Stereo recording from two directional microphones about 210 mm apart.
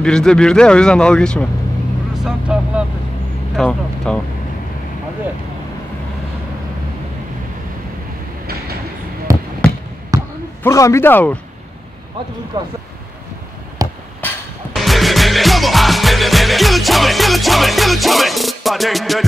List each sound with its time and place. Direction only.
0.0 s speech: 5° left (ahead or behind)
2.1 s vehicle: 5° right (ahead or behind)
3.5 s speech: 5° left (ahead or behind)
9.3 s basketball bounce: 15° right (ahead or behind)
10.6 s a man's voice: 15° left (ahead or behind)
12.6 s speech: 20° right (ahead or behind)
13.8 s a sound: 15° right (ahead or behind)
14.2 s music: centre (ahead or behind)